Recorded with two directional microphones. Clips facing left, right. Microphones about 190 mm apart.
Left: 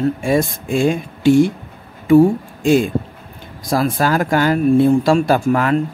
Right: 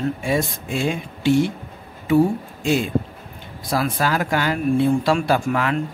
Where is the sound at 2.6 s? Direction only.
45° left (ahead or behind).